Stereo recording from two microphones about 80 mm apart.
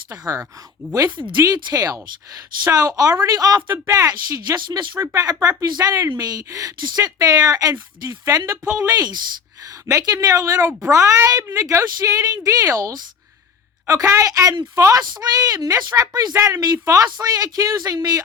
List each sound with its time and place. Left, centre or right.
0.1 s speech: right
1.5 s speech: right
4.1 s speech: right
4.9 s speech: right
5.4 s speech: right
5.7 s speech: right
8.9 s speech: right
9.6 s speech: right
11.9 s speech: right
15.1 s speech: right